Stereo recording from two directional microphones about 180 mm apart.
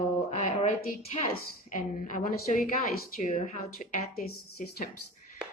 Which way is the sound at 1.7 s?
45° left (ahead or behind).